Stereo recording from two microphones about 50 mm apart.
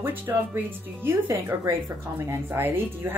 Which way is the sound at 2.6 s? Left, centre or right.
Right.